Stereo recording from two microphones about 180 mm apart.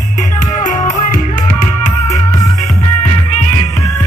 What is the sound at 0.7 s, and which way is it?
Music, 45° left (ahead or behind).